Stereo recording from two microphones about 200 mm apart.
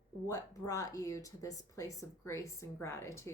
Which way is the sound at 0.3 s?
15° left (ahead or behind).